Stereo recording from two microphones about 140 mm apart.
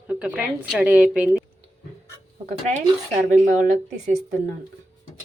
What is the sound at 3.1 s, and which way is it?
Speech, 60° right (ahead or behind).